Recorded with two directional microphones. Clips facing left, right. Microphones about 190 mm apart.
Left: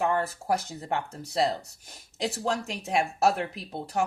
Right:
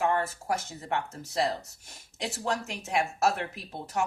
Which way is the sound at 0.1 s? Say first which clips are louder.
Left 2 dB; 35° left (ahead or behind).